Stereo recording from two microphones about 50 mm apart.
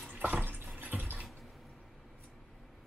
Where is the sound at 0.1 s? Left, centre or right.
Right.